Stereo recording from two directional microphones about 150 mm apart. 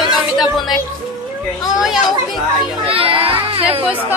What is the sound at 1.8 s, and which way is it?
Speech, 5° right (ahead or behind).